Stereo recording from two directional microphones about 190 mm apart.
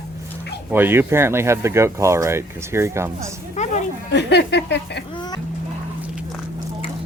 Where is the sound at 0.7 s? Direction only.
10° right (ahead or behind).